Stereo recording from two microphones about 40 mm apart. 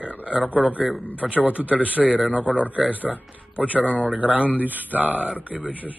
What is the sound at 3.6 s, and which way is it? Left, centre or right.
Speech, right.